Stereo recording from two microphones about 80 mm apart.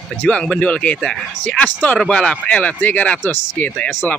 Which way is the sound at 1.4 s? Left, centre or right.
Centre.